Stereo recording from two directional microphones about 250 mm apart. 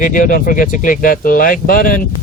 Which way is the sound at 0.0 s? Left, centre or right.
Left.